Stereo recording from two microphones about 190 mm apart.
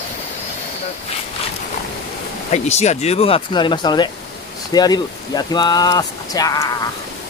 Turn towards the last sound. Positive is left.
turn(degrees=20)  # may be behind; listen again after turning